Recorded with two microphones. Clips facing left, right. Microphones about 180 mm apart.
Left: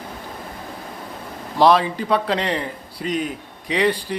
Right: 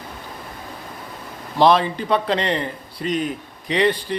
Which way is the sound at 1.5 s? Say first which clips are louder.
Even; 5° left (ahead or behind).